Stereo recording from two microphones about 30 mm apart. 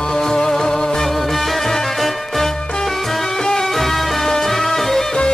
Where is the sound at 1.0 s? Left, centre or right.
Centre.